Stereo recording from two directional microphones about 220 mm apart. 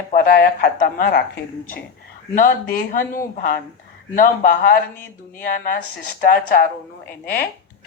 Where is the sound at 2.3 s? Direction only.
40° left (ahead or behind).